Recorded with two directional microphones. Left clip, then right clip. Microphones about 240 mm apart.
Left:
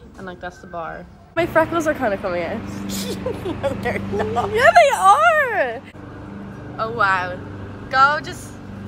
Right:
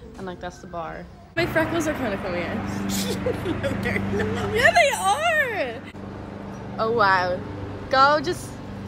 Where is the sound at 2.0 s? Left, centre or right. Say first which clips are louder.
Left 6 dB; centre.